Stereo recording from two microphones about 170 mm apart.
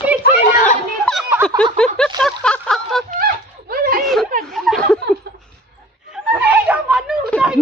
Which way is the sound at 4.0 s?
Centre (ahead or behind).